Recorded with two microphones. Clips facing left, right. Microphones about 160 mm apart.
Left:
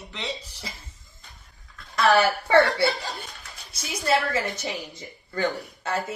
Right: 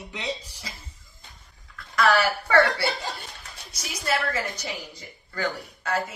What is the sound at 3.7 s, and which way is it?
A woman's voice, 25° left (ahead or behind).